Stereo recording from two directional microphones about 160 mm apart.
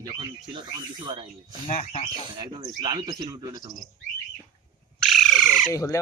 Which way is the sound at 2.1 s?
25° right (ahead or behind).